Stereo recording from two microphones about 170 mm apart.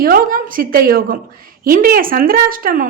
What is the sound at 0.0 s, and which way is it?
A woman's voice, 60° right (ahead or behind).